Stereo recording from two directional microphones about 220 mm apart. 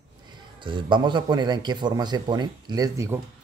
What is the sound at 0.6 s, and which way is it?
A man's voice, 20° right (ahead or behind).